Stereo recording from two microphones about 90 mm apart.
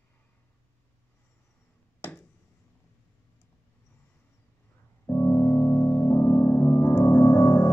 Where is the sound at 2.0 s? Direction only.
25° left (ahead or behind).